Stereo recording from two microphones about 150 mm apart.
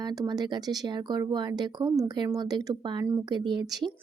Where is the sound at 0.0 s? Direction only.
25° right (ahead or behind).